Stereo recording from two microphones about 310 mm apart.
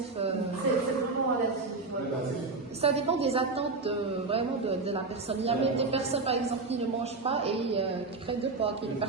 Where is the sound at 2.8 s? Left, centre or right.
Centre.